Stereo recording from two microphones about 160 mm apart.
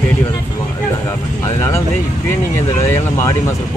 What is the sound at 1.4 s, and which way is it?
Speech, 20° left (ahead or behind).